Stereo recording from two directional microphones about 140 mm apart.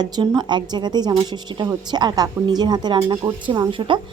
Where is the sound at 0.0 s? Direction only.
30° right (ahead or behind).